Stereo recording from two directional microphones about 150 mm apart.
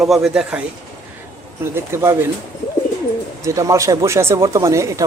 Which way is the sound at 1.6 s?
15° right (ahead or behind).